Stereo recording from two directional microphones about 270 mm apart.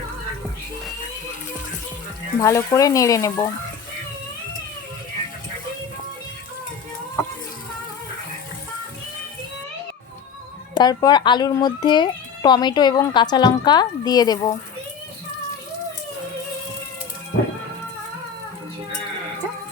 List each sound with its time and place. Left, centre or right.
2.4 s speech: centre
10.8 s speech: centre